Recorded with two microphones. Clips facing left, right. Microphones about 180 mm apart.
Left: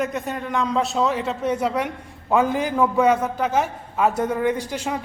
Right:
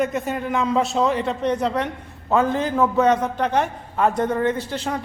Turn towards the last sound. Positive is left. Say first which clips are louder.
# even
turn(degrees=10)  # may be behind; listen again after turning